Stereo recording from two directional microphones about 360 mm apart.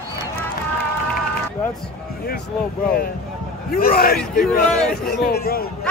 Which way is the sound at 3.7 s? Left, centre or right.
Left.